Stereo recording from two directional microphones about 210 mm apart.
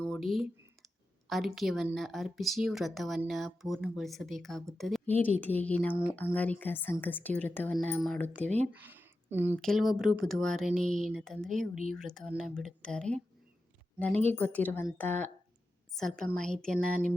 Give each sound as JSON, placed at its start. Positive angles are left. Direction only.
{"t": 0.0, "sound": "a sound", "side_deg": 0}
{"t": 1.3, "sound": "a woman's voice", "side_deg": 0}
{"t": 8.4, "sound": "speech", "side_deg": -35}
{"t": 8.7, "sound": "speech", "side_deg": -10}
{"t": 9.6, "sound": "a woman's voice", "side_deg": 0}
{"t": 14.3, "sound": "a woman's voice", "side_deg": 5}